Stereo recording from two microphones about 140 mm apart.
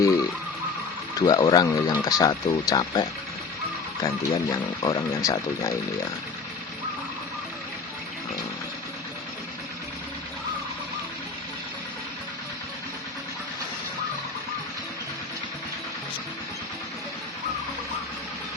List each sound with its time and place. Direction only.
1.1 s speech: 30° left (ahead or behind)